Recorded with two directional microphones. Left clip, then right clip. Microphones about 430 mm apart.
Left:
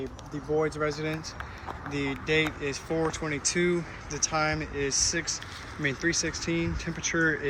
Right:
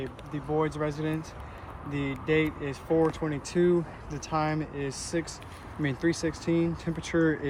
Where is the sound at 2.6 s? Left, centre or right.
Centre.